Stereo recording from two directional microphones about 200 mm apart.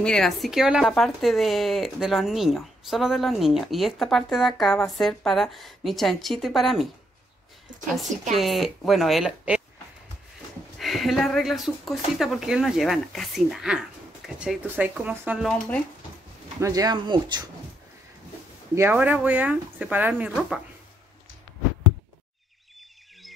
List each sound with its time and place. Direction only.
0.0 s speech: 5° left (ahead or behind)
8.4 s speech: centre (ahead or behind)
10.8 s speech: centre (ahead or behind)
16.5 s speech: 15° right (ahead or behind)
18.8 s speech: 10° right (ahead or behind)